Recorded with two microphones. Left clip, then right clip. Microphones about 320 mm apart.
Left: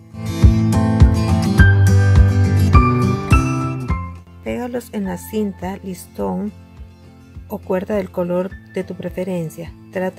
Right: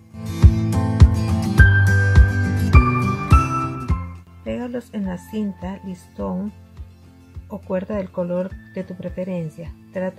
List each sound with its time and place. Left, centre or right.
0.1 s music: centre
4.5 s speech: left